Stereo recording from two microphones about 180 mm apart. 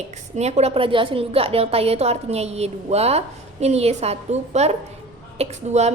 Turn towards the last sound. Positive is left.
turn(degrees=-40)  # may be behind; listen again after turning